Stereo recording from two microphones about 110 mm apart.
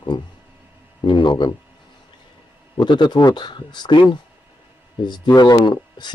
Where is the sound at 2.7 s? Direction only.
45° left (ahead or behind).